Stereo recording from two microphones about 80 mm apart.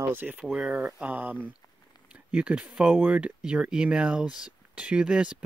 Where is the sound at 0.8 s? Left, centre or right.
Centre.